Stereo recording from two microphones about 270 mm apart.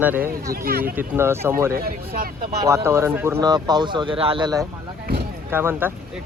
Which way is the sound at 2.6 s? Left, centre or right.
Centre.